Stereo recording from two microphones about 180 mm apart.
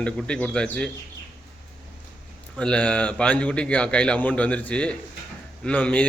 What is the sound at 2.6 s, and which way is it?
A man's voice, 5° left (ahead or behind).